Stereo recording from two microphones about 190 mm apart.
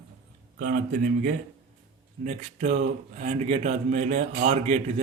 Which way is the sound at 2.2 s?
40° right (ahead or behind).